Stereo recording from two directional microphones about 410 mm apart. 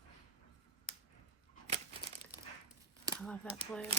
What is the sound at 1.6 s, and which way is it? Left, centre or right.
Crumpling, centre.